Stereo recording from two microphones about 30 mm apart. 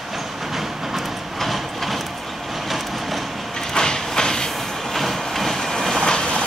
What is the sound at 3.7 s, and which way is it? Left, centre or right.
Train, left.